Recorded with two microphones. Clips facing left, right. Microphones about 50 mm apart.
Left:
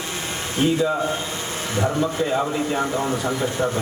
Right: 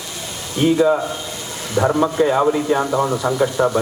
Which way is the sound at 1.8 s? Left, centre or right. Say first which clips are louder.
Right 6 dB; right.